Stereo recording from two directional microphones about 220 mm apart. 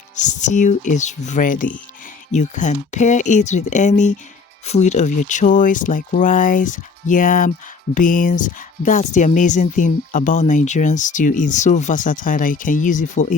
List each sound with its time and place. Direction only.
0.2 s speech: 35° left (ahead or behind)